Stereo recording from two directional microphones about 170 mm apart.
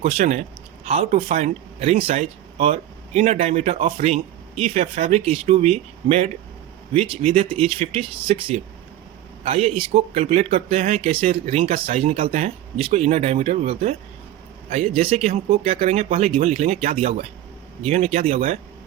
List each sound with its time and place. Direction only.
0.0 s speech: 40° right (ahead or behind)